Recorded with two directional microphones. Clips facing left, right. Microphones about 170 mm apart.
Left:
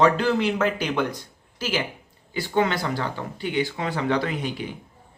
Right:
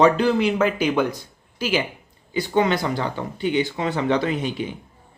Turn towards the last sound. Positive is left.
turn(degrees=-20)  # may be behind; listen again after turning